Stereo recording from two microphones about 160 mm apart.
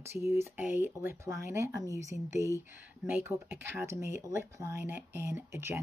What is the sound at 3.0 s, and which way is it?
Speech, 15° right (ahead or behind).